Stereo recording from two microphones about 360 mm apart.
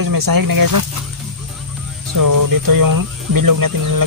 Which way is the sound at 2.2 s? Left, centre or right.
Right.